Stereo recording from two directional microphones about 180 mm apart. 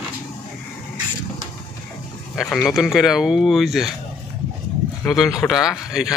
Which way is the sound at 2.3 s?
Centre (ahead or behind).